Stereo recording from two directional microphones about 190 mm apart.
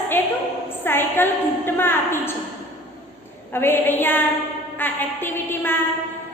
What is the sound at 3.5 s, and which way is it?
A woman's voice, 10° left (ahead or behind).